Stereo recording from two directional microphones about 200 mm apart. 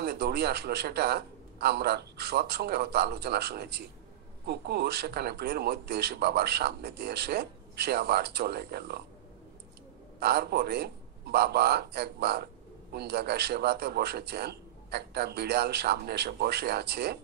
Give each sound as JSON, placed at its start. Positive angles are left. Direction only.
{"t": 0.0, "sound": "a man's voice", "side_deg": -55}
{"t": 10.2, "sound": "a man's voice", "side_deg": -55}